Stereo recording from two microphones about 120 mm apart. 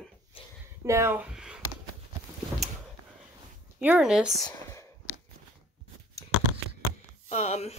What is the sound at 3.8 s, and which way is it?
Speech, 10° right (ahead or behind).